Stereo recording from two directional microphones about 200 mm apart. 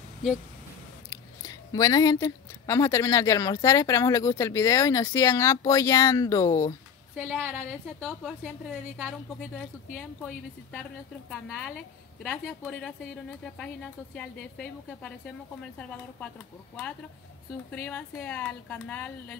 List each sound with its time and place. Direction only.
1.1 s speech: 15° left (ahead or behind)
7.4 s a woman's voice: 10° right (ahead or behind)
14.1 s a woman's voice: 5° left (ahead or behind)
17.8 s speech: 10° left (ahead or behind)